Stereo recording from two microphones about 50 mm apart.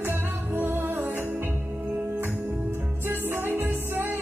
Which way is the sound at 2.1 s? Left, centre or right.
Right.